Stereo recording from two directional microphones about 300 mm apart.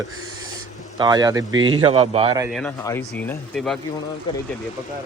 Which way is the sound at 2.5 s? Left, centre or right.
Centre.